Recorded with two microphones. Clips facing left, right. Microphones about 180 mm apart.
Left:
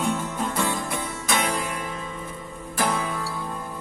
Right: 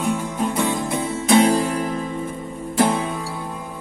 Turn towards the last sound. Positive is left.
turn(degrees=-25)  # may be behind; listen again after turning